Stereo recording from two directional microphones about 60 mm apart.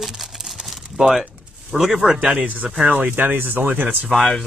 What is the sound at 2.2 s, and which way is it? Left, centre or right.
Speech, right.